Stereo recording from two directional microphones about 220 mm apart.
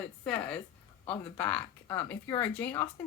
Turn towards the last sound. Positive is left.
turn(degrees=10)  # may be behind; listen again after turning